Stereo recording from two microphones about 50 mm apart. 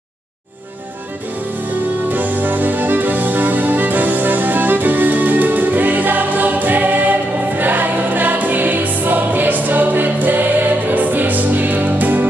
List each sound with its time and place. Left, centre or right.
2.0 s music: right